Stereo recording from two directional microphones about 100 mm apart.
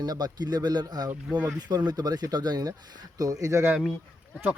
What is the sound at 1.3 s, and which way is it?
Speech, 15° right (ahead or behind).